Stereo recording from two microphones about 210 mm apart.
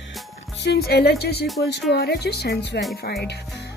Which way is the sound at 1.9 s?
50° left (ahead or behind).